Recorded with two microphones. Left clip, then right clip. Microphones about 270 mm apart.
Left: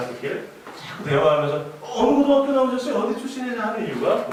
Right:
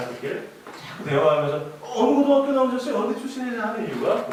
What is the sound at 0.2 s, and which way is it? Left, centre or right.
A man's voice, centre.